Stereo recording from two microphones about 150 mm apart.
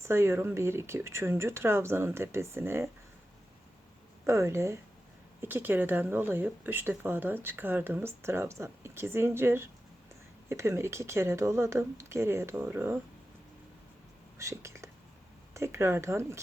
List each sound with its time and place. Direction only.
0.0 s speech: 15° right (ahead or behind)
4.3 s a woman's voice: 20° right (ahead or behind)
14.3 s a woman's voice: 20° right (ahead or behind)